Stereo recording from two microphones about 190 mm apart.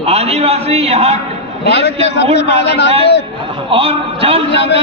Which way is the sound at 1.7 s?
65° left (ahead or behind).